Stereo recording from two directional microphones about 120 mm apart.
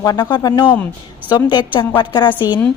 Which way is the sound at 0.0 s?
35° left (ahead or behind).